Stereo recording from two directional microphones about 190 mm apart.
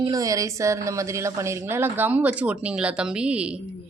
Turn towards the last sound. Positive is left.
turn(degrees=-5)  # may be behind; listen again after turning